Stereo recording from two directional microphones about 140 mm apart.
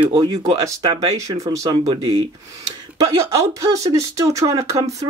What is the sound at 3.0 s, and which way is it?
Speech, 25° right (ahead or behind).